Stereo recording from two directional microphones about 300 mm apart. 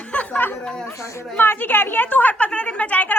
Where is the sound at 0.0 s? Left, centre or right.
Centre.